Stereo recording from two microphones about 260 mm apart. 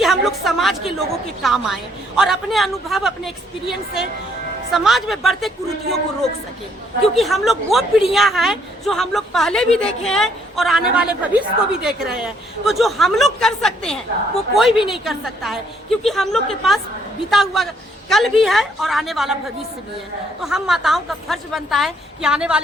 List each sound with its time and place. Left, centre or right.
0.0 s a woman's voice: centre
7.2 s a woman's voice: centre
20.4 s a woman's voice: centre